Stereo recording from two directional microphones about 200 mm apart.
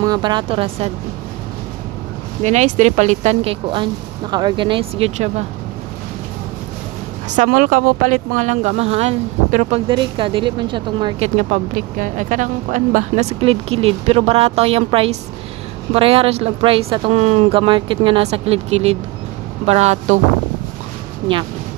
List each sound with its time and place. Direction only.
0.0 s speech: 20° right (ahead or behind)
2.4 s speech: 35° right (ahead or behind)
7.2 s speech: 40° right (ahead or behind)